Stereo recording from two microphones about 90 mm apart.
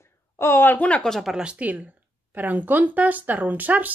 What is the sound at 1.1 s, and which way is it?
Speech, 5° right (ahead or behind).